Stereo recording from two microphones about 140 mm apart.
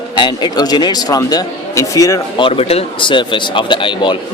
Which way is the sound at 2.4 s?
45° left (ahead or behind).